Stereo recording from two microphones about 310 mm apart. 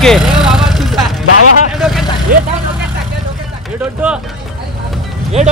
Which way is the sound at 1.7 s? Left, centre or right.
Centre.